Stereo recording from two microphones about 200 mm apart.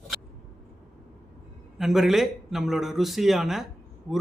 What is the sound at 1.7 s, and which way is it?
A man's voice, centre (ahead or behind).